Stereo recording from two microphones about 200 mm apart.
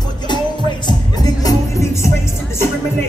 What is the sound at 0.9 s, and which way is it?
Music, 20° left (ahead or behind).